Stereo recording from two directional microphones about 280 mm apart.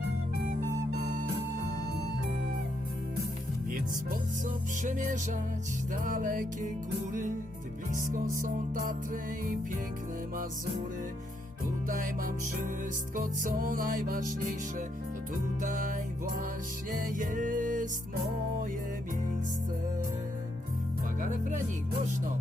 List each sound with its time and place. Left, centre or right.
0.9 s music: right
4.8 s music: right
11.9 s music: right
15.6 s music: right
21.2 s speech: right